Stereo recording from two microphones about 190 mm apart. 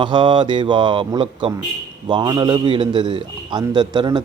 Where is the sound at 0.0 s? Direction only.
25° right (ahead or behind).